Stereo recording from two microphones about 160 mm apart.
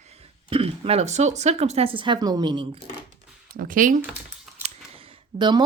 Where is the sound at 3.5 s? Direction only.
60° right (ahead or behind).